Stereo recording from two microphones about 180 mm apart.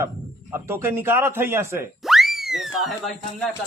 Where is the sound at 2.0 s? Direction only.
Centre (ahead or behind).